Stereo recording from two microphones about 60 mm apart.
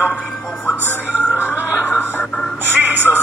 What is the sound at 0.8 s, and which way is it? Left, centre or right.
Music, right.